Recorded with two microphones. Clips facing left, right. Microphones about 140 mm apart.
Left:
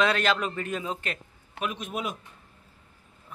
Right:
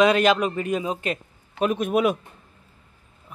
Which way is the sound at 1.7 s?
60° right (ahead or behind).